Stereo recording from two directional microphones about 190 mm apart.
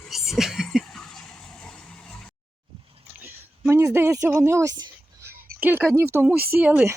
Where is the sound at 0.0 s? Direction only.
Centre (ahead or behind).